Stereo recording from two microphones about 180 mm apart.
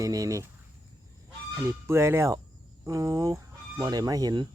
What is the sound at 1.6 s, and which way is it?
Speech, 15° right (ahead or behind).